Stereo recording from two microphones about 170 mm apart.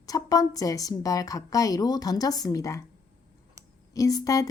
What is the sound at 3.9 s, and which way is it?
Speech, 20° left (ahead or behind).